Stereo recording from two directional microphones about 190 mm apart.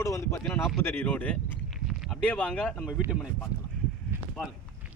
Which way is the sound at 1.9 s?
Centre (ahead or behind).